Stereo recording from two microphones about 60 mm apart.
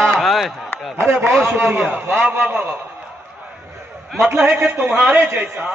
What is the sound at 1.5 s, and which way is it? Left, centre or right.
Speech, right.